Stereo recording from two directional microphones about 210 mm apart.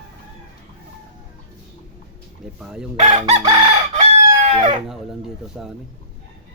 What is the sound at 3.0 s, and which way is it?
Chicken, 30° right (ahead or behind).